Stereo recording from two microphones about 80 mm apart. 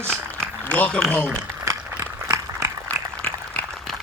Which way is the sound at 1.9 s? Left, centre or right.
Right.